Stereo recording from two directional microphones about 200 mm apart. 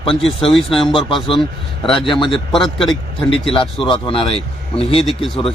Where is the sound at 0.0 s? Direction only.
25° left (ahead or behind).